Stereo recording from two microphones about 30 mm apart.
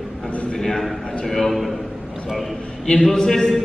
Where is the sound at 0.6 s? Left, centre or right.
Centre.